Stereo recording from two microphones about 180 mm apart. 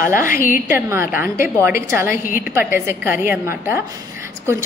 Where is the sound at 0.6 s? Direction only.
15° right (ahead or behind).